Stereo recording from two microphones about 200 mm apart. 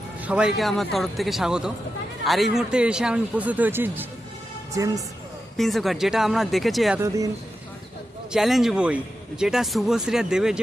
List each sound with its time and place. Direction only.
0.2 s speech: 5° right (ahead or behind)
5.5 s speech: centre (ahead or behind)
8.3 s speech: centre (ahead or behind)